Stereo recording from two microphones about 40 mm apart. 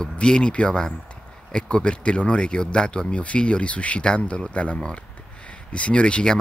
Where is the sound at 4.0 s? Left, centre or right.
Left.